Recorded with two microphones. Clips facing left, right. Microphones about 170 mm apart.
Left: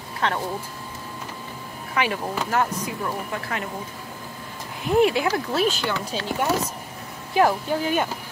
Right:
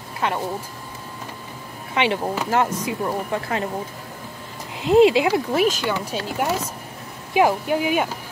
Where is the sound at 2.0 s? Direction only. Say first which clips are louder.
Right 3 dB; 25° right (ahead or behind).